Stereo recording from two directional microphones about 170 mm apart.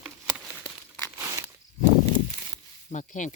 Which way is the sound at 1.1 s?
15° right (ahead or behind).